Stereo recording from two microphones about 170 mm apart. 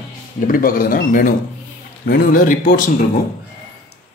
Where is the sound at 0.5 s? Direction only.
55° left (ahead or behind).